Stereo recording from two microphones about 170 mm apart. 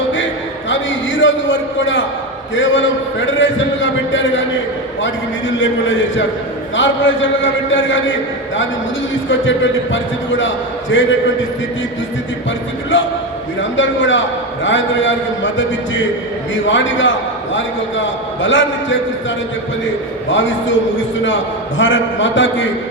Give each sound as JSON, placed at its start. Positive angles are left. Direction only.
{"t": 0.7, "sound": "a sound", "side_deg": 90}
{"t": 2.6, "sound": "a man's voice", "side_deg": 90}
{"t": 5.5, "sound": "a man's voice", "side_deg": 90}
{"t": 9.3, "sound": "a man's voice", "side_deg": 90}
{"t": 12.9, "sound": "a man's voice", "side_deg": 90}
{"t": 20.3, "sound": "a man's voice", "side_deg": 90}
{"t": 21.8, "sound": "a man's voice", "side_deg": 90}